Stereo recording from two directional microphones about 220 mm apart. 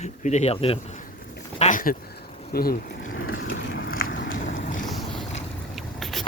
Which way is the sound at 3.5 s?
45° left (ahead or behind).